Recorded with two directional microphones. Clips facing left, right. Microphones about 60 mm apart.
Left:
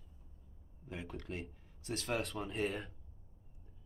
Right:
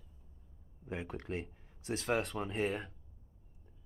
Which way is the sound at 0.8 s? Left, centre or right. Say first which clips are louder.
Right 4 dB; right.